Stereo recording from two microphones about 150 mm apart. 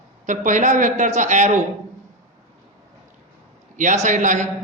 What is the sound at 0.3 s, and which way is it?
A man's voice, 55° right (ahead or behind).